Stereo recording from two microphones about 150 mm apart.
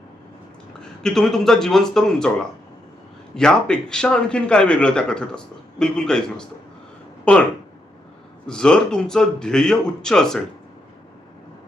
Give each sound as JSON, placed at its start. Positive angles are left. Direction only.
{"t": 0.8, "sound": "a man's voice", "side_deg": 5}
{"t": 8.4, "sound": "a man's voice", "side_deg": 5}